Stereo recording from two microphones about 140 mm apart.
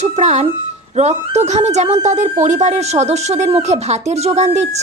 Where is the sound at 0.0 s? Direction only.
50° right (ahead or behind).